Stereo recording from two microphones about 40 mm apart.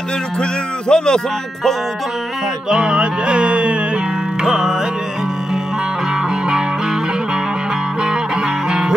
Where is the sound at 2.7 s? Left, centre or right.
Right.